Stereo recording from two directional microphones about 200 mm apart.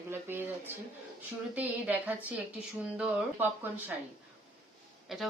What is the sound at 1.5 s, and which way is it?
Speech, 10° right (ahead or behind).